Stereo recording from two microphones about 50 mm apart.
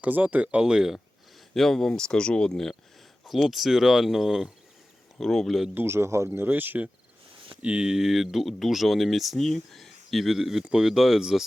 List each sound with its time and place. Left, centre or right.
0.0 s speech: right
0.6 s speech: centre
1.5 s speech: centre
3.2 s speech: centre
5.7 s a man's voice: right
6.3 s speech: right
7.6 s speech: right
7.9 s speech: centre